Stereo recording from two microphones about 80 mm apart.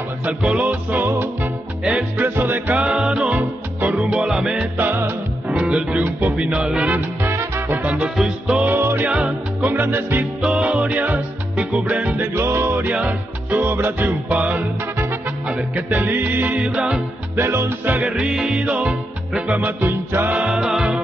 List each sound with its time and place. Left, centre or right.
0.2 s music: centre
2.7 s music: centre
4.7 s music: right
7.2 s music: right
7.8 s music: centre
8.7 s music: right
9.2 s music: right
10.4 s music: centre; by 12.9 s right
12.9 s music: centre
13.6 s music: right; by 17.0 s centre
17.4 s music: right
18.0 s music: centre
19.5 s music: right; by 21.0 s centre